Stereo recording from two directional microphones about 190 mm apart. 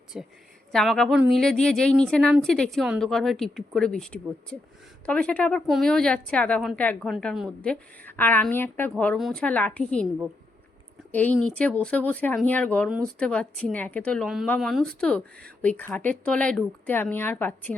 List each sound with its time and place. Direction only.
0.1 s a woman's voice: 5° right (ahead or behind)
11.1 s a woman's voice: 10° left (ahead or behind)